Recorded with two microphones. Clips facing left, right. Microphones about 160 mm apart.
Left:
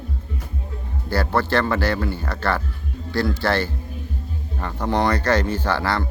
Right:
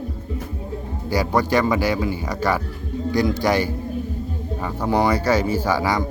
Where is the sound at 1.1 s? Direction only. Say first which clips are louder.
Right 2 dB; 10° right (ahead or behind).